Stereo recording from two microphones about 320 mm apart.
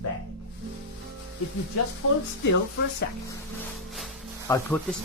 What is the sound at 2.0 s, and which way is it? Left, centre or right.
Speech, left.